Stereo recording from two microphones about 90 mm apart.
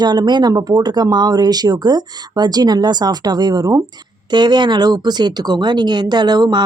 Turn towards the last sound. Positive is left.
turn(degrees=-50)  # may be behind; listen again after turning